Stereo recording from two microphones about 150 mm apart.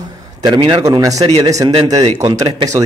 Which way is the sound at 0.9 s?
25° right (ahead or behind).